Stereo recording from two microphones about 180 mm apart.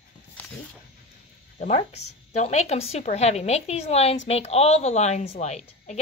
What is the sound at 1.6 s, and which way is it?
A woman's voice, 35° left (ahead or behind).